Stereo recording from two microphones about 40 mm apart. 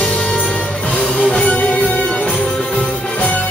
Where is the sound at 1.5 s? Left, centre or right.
Left.